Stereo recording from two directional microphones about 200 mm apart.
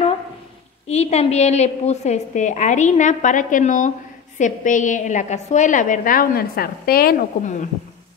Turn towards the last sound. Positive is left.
turn(degrees=45)  # may be behind; listen again after turning